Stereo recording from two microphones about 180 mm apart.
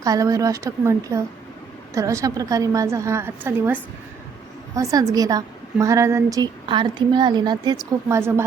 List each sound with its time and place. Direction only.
0.0 s a woman's voice: 20° right (ahead or behind)